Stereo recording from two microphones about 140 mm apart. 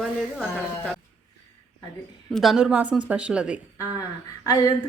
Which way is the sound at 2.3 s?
Centre (ahead or behind).